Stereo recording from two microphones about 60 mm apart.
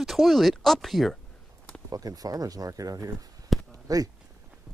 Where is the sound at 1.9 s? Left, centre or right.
Right.